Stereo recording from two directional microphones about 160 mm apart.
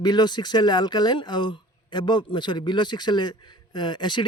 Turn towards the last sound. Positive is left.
turn(degrees=30)  # may be behind; listen again after turning